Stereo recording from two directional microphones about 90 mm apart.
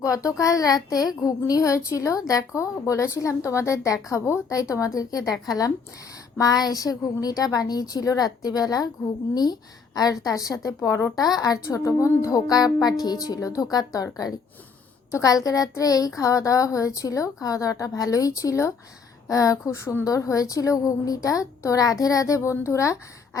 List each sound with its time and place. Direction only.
0.0 s a woman's voice: 35° left (ahead or behind)